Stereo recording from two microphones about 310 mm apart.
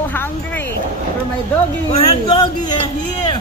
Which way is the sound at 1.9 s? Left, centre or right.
Centre.